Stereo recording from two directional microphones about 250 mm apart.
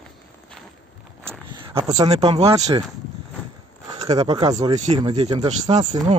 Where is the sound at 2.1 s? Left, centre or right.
Right.